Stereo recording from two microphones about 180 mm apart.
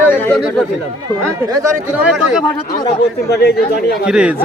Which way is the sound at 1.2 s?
15° right (ahead or behind).